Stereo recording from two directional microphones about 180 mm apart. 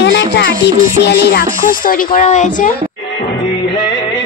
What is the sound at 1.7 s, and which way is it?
Speech, 50° left (ahead or behind).